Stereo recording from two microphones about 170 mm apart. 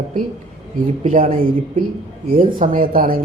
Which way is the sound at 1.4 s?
55° right (ahead or behind).